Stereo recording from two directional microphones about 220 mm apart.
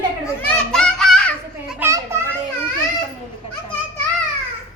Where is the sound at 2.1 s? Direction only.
10° right (ahead or behind).